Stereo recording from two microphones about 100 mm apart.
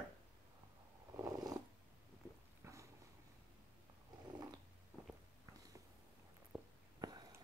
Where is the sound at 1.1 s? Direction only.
40° right (ahead or behind).